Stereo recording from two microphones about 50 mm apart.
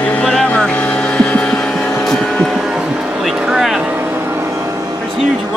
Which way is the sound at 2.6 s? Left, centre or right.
Centre.